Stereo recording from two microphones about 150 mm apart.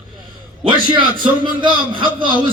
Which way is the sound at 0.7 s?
30° right (ahead or behind).